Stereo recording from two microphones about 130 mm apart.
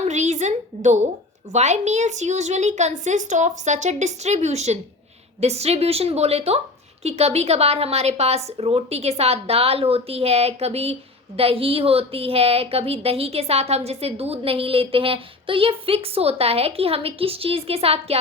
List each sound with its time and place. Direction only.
0.0 s a woman's voice: 65° right (ahead or behind)